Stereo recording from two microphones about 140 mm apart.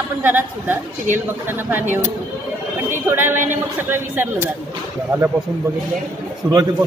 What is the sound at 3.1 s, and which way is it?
A woman's voice, 15° right (ahead or behind).